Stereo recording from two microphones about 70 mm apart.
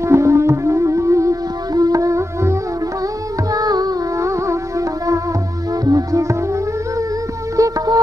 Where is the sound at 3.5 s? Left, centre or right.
Right.